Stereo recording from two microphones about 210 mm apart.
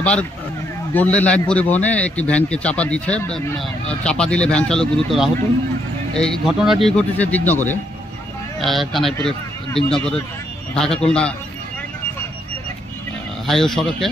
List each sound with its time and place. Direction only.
0.0 s a man's voice: 5° left (ahead or behind)
13.5 s a man's voice: centre (ahead or behind)